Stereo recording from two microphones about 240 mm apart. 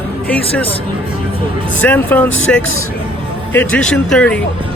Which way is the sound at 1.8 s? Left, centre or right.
Centre.